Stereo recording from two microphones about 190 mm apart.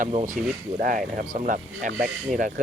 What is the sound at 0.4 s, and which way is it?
Speech, centre (ahead or behind).